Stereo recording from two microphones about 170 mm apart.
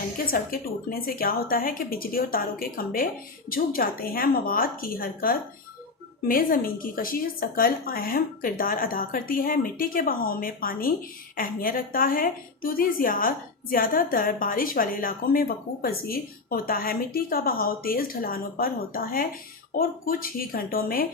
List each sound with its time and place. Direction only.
0.3 s a woman's voice: 60° left (ahead or behind)